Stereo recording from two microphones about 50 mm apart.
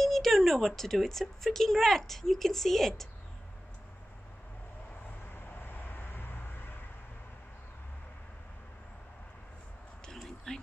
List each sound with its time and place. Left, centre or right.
0.0 s speech: centre
5.3 s vehicle: left
10.1 s a sound: centre